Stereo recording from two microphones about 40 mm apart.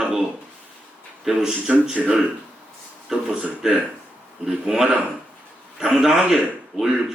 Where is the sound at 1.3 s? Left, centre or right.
Centre.